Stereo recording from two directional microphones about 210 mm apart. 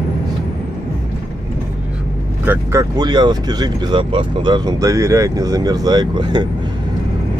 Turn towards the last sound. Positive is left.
turn(degrees=-20)  # may be behind; listen again after turning